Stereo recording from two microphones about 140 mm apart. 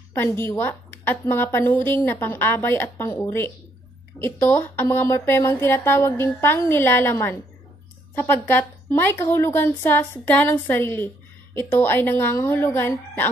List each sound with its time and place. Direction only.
0.1 s a woman's voice: 15° left (ahead or behind)